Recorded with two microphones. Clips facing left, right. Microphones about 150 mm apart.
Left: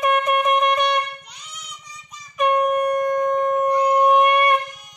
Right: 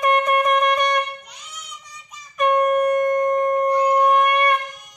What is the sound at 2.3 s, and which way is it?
Wind instrument, centre (ahead or behind).